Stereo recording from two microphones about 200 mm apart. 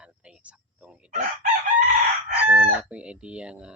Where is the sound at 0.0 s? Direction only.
5° right (ahead or behind).